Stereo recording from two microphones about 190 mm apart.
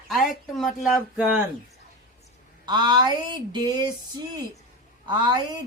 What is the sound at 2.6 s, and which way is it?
Speech, 25° right (ahead or behind).